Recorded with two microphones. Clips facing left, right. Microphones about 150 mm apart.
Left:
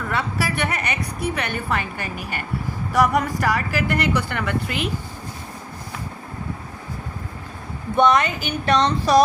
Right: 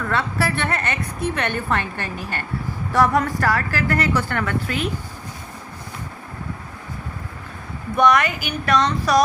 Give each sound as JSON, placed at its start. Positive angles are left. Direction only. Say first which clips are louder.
{"t": 0.1, "sound": "a woman's voice", "louder": "right 2 dB", "side_deg": 15}
{"t": 7.9, "sound": "speech", "louder": "even", "side_deg": 25}